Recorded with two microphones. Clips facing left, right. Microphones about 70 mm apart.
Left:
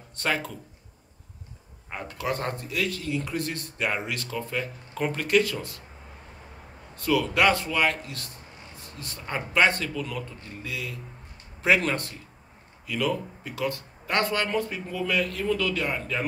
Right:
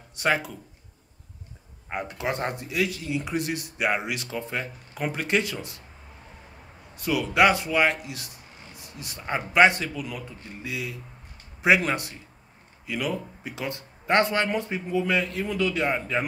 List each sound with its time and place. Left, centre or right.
0.1 s speech: centre
1.9 s speech: right
4.9 s speech: centre
5.2 s speech: right
7.0 s speech: centre